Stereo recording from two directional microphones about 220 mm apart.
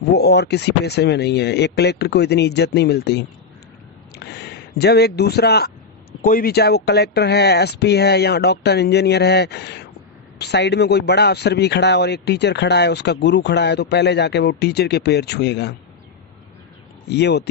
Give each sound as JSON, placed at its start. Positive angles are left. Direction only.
{"t": 0.1, "sound": "a man's voice", "side_deg": 50}
{"t": 17.1, "sound": "a man's voice", "side_deg": 50}